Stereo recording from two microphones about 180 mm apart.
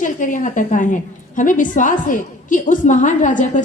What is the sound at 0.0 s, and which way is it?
A woman's voice, 45° left (ahead or behind).